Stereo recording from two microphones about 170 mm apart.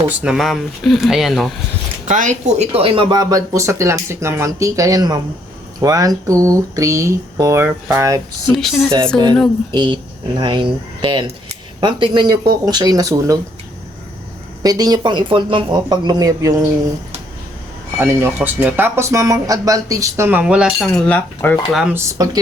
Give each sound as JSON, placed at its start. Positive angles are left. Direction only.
{"t": 0.2, "sound": "speech", "side_deg": 0}
{"t": 2.0, "sound": "speech", "side_deg": -45}
{"t": 8.5, "sound": "speech", "side_deg": 0}
{"t": 9.7, "sound": "speech", "side_deg": -25}
{"t": 14.6, "sound": "speech", "side_deg": -25}
{"t": 18.0, "sound": "speech", "side_deg": -15}
{"t": 20.4, "sound": "speech", "side_deg": -5}
{"t": 21.7, "sound": "speech", "side_deg": 0}
{"t": 21.9, "sound": "speech", "side_deg": -20}